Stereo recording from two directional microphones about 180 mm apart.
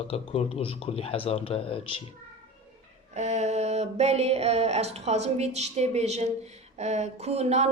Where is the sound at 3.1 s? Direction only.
40° right (ahead or behind).